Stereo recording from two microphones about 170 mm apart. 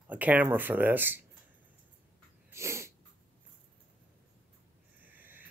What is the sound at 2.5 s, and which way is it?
Sneeze, 15° right (ahead or behind).